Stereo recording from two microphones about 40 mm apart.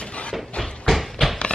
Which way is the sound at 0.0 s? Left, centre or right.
Left.